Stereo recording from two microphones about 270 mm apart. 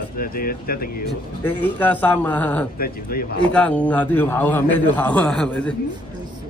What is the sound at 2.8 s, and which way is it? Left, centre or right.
Speech, left.